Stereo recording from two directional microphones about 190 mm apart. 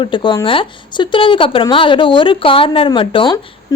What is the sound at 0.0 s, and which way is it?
A woman's voice, 25° left (ahead or behind).